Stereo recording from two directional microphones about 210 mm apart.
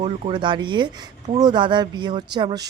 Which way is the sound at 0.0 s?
20° right (ahead or behind).